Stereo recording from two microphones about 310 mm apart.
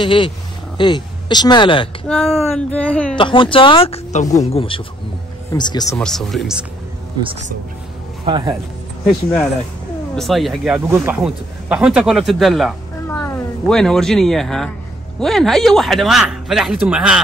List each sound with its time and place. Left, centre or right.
0.0 s speech: centre
2.0 s speech: centre
3.2 s speech: centre
8.3 s speech: centre
10.1 s speech: centre